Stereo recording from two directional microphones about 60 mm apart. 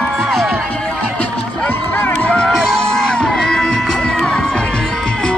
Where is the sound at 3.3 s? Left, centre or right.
Centre.